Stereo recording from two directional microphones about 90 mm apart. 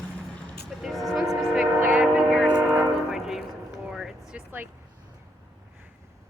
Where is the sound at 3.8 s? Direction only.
5° right (ahead or behind).